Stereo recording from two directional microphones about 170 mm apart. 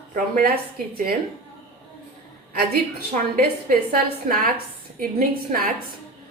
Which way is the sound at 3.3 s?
60° right (ahead or behind).